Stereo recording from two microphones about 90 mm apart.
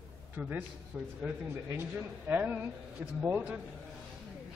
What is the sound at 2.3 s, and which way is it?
A man's voice, 20° right (ahead or behind).